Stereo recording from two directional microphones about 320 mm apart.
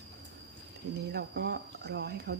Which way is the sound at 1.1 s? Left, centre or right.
Right.